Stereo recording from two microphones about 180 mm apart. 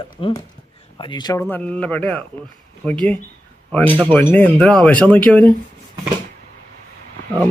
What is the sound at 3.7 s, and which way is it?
Speech, 10° left (ahead or behind).